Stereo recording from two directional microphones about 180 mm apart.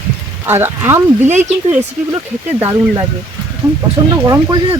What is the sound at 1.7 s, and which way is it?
Speech, 10° right (ahead or behind).